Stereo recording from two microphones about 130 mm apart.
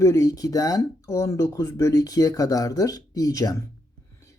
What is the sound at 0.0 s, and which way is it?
Speech, 25° left (ahead or behind).